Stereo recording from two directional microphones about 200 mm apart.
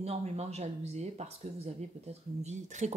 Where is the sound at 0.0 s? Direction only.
30° right (ahead or behind).